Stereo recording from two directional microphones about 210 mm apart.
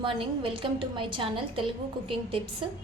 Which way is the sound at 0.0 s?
25° right (ahead or behind).